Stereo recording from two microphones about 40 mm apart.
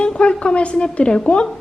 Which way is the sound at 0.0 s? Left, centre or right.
Left.